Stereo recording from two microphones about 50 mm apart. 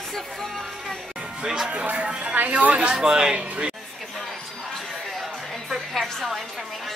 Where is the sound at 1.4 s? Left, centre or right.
Centre.